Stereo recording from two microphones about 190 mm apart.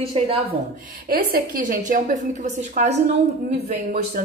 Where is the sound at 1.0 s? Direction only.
50° right (ahead or behind).